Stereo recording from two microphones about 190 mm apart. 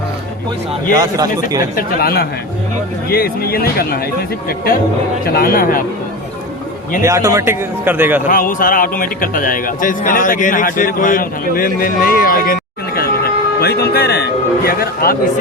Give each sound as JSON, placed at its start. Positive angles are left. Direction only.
{"t": 0.9, "sound": "a man's voice", "side_deg": -20}
{"t": 1.7, "sound": "a man's voice", "side_deg": 55}
{"t": 7.0, "sound": "speech", "side_deg": -15}
{"t": 8.3, "sound": "a man's voice", "side_deg": 45}
{"t": 13.6, "sound": "a man's voice", "side_deg": 55}